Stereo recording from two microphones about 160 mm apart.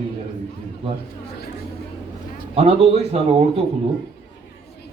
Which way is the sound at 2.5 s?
40° right (ahead or behind).